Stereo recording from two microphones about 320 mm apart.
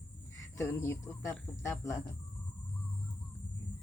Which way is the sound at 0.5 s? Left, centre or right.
Centre.